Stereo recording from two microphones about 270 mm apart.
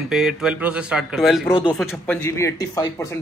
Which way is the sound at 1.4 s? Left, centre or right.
Centre.